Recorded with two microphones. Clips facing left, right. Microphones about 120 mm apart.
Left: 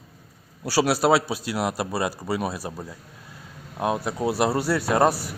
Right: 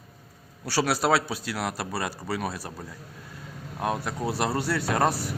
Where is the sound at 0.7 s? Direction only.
10° left (ahead or behind).